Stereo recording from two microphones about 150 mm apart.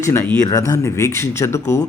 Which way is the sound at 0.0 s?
15° left (ahead or behind).